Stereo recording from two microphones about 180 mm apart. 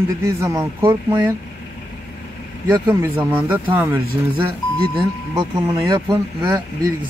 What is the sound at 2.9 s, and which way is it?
A man's voice, 10° right (ahead or behind).